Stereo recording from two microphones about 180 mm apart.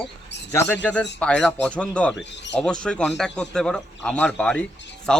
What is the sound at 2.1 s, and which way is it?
Speech, 80° left.